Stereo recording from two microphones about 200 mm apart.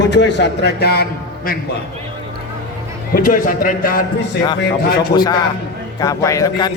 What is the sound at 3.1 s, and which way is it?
Speech, 45° left (ahead or behind).